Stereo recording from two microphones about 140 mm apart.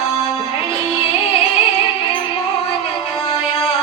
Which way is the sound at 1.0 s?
45° left (ahead or behind).